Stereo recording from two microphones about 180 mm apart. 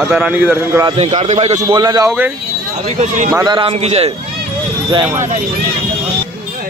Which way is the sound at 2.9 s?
40° right (ahead or behind).